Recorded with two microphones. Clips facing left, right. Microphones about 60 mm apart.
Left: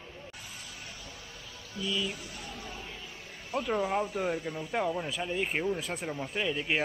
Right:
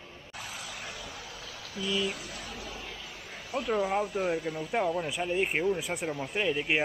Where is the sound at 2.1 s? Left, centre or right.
Right.